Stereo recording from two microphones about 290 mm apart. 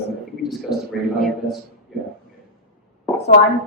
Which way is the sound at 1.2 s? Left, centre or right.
Centre.